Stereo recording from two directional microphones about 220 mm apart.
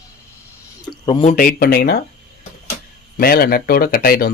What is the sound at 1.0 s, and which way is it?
Speech, 20° left (ahead or behind).